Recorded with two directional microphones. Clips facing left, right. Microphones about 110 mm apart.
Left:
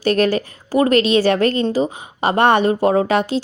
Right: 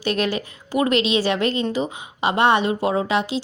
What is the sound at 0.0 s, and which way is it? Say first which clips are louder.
A woman's voice: left 6 dB; 45° left (ahead or behind).